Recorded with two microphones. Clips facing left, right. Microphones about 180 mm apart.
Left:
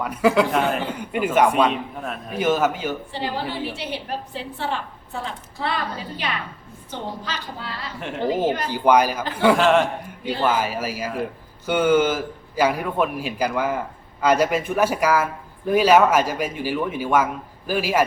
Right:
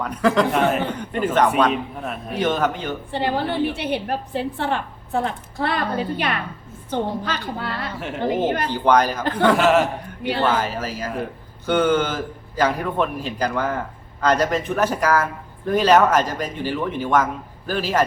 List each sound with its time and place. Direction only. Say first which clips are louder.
0.0 s a man's voice: even; 10° left (ahead or behind)
3.1 s a woman's voice: right 5 dB; 55° right (ahead or behind)
7.9 s a man's voice: right 1 dB; centre (ahead or behind)
8.6 s a man's voice: left 1 dB; 10° left (ahead or behind)
9.6 s a man's voice: right 1 dB; 5° right (ahead or behind)
10.4 s a man's voice: left 1 dB; 10° left (ahead or behind)